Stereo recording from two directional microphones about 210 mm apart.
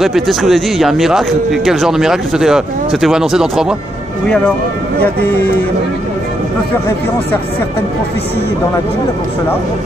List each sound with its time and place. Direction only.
0.0 s speech: centre (ahead or behind)
5.0 s speech: 10° left (ahead or behind)